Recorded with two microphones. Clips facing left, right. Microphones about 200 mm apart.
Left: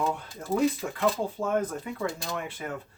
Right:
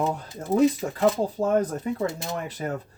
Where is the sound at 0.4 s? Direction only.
20° right (ahead or behind).